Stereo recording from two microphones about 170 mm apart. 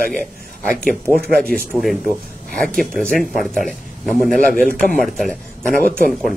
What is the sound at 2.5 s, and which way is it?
Speech, 55° right (ahead or behind).